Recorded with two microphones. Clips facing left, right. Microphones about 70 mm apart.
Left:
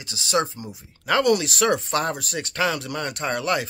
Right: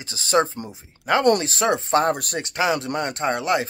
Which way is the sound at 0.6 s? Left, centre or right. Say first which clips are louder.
Right 1 dB; right.